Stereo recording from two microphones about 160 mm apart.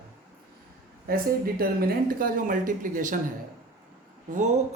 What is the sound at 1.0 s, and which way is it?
Speech, 65° right (ahead or behind).